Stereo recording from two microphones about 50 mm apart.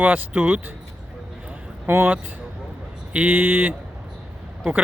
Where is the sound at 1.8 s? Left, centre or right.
Right.